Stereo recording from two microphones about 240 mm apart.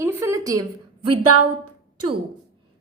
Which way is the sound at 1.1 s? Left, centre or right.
Right.